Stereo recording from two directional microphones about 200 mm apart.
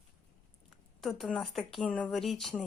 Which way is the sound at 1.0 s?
Centre (ahead or behind).